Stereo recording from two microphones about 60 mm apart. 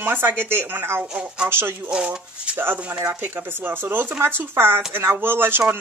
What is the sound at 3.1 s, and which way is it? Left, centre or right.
Speech, right.